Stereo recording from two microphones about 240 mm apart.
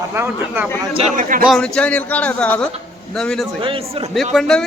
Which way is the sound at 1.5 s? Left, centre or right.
Centre.